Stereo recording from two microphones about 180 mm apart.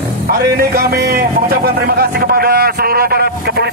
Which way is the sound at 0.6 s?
60° right (ahead or behind).